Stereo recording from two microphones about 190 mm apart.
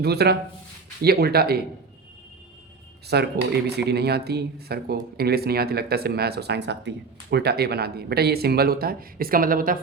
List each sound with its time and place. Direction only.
0.0 s speech: 60° right (ahead or behind)
3.1 s speech: 60° right (ahead or behind)